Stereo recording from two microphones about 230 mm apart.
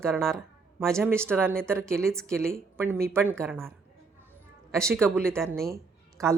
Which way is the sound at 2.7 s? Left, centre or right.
Centre.